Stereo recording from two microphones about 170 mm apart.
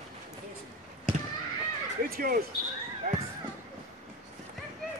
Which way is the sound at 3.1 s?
55° right (ahead or behind).